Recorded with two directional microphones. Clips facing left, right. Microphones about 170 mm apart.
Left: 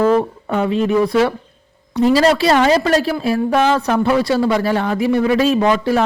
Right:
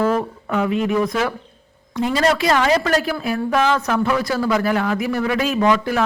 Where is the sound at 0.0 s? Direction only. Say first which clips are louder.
Left 5 dB; 30° left (ahead or behind).